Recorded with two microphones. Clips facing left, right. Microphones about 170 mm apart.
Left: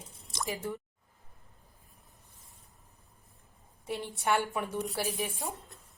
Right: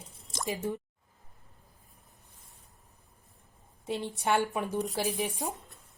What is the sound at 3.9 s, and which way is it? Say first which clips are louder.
A woman's voice: right 1 dB; 20° right (ahead or behind).